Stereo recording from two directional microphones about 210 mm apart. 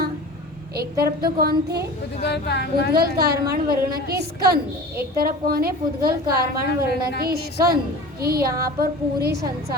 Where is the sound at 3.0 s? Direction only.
50° right (ahead or behind).